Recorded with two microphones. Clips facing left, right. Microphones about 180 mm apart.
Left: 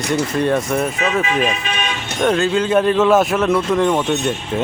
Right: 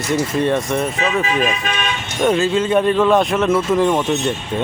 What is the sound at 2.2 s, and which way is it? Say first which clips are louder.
Speech: even; centre (ahead or behind).